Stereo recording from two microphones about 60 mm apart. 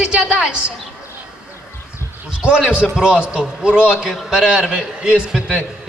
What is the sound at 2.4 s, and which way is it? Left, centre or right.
A man's voice, centre.